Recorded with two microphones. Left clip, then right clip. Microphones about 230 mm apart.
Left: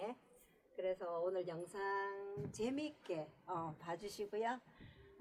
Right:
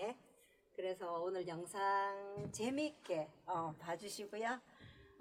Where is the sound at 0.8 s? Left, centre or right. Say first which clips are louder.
Left 1 dB; right.